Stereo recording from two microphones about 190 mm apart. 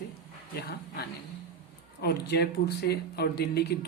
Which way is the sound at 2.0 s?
60° left (ahead or behind).